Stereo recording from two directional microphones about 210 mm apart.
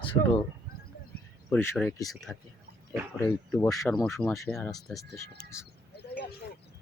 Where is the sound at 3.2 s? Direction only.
10° left (ahead or behind).